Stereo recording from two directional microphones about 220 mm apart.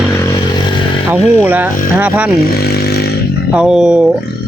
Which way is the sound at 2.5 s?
45° left (ahead or behind).